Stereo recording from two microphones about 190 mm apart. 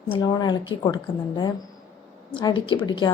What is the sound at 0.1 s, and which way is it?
A woman's voice, 25° left (ahead or behind).